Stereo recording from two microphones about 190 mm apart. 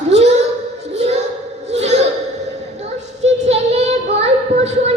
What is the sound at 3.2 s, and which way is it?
Child singing, 35° right (ahead or behind).